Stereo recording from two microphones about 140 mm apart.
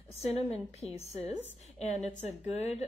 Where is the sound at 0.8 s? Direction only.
50° left (ahead or behind).